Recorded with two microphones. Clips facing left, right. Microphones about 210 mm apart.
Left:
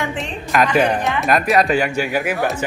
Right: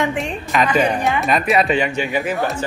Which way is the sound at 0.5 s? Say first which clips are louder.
Left 2 dB; centre (ahead or behind).